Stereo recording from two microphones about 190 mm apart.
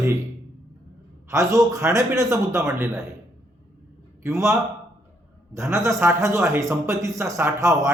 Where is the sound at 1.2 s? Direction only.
15° right (ahead or behind).